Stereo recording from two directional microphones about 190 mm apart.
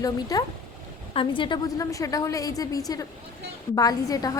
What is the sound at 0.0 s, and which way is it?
A woman's voice, 20° left (ahead or behind).